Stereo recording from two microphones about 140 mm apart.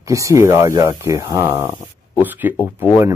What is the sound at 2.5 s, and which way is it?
Speech, 20° left (ahead or behind).